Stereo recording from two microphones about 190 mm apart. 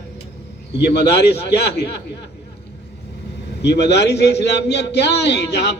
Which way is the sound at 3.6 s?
65° left (ahead or behind).